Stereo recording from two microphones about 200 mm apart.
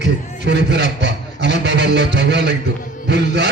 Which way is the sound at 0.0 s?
60° right (ahead or behind).